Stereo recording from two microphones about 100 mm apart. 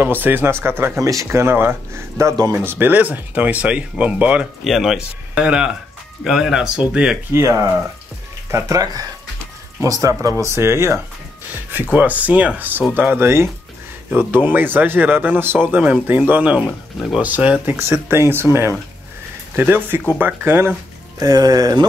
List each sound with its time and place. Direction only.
0.0 s speech: 20° right (ahead or behind)
4.6 s speech: centre (ahead or behind)
7.3 s speech: 30° right (ahead or behind)
11.7 s speech: 15° right (ahead or behind)
21.2 s speech: 40° right (ahead or behind)